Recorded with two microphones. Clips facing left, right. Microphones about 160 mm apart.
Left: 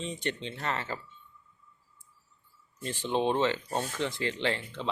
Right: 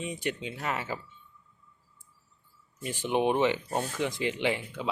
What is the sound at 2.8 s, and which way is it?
Speech, 10° right (ahead or behind).